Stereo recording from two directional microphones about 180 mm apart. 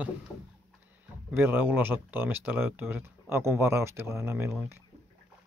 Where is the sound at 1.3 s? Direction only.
10° right (ahead or behind).